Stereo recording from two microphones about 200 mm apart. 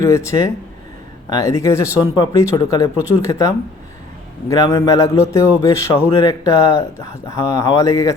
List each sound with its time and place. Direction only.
0.0 s speech: 15° left (ahead or behind)